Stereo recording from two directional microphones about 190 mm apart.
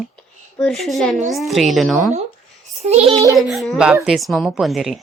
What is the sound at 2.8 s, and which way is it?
Speech, 35° right (ahead or behind).